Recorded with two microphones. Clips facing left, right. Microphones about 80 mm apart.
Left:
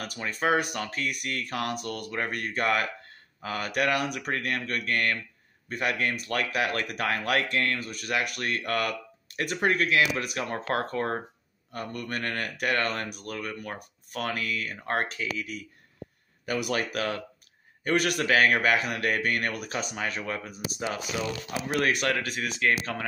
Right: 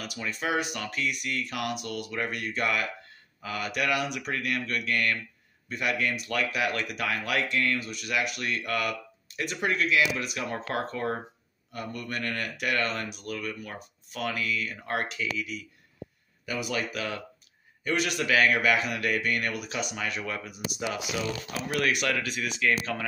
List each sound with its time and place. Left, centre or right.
0.0 s speech: left
16.4 s speech: left